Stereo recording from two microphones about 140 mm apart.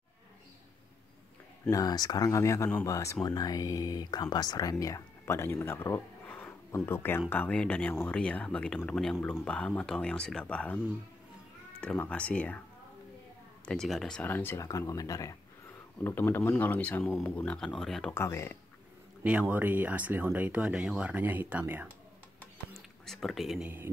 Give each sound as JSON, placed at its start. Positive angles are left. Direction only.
{"t": 1.7, "sound": "speech", "side_deg": 25}
{"t": 9.1, "sound": "speech", "side_deg": 10}
{"t": 11.8, "sound": "speech", "side_deg": 10}
{"t": 13.7, "sound": "speech", "side_deg": 0}
{"t": 17.6, "sound": "speech", "side_deg": 5}
{"t": 18.1, "sound": "speech", "side_deg": 20}
{"t": 19.2, "sound": "speech", "side_deg": -10}
{"t": 22.8, "sound": "a sound", "side_deg": 0}